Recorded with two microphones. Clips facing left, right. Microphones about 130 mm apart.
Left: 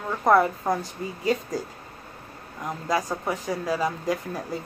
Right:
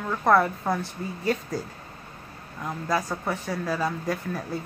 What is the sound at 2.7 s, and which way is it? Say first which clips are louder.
A woman's voice: left 1 dB; 15° left (ahead or behind).